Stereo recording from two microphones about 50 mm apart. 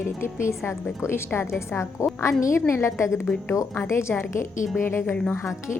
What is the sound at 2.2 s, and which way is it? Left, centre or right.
A woman's voice, left.